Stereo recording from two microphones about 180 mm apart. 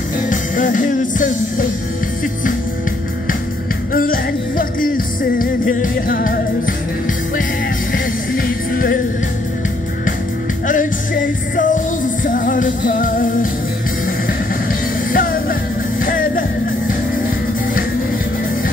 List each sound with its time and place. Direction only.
0.3 s music: 45° left (ahead or behind)
3.9 s music: 55° left (ahead or behind)
10.7 s music: 50° left (ahead or behind)